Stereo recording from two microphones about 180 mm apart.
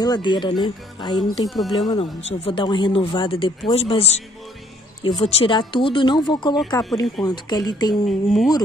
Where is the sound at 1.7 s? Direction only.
20° left (ahead or behind).